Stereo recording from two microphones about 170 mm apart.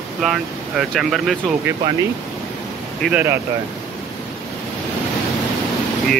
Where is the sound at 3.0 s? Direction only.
10° right (ahead or behind).